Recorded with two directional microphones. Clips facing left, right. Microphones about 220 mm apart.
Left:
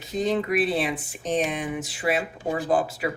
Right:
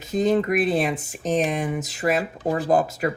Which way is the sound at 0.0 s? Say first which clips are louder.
Right 4 dB; 45° right (ahead or behind).